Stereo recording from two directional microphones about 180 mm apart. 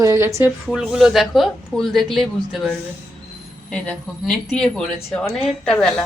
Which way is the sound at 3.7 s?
5° left (ahead or behind).